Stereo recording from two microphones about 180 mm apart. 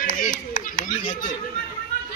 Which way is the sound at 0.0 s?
50° left (ahead or behind).